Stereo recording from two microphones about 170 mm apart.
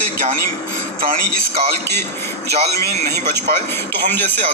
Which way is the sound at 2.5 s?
40° right (ahead or behind).